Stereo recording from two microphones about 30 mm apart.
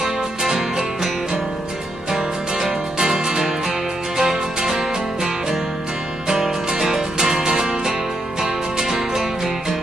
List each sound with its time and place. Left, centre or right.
0.0 s music: centre
2.0 s music: right
6.8 s music: centre